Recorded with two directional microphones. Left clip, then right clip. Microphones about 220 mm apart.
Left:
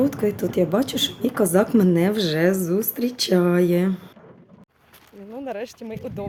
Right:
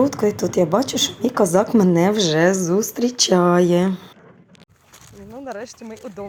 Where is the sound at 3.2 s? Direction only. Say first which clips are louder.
Right 3 dB; centre (ahead or behind).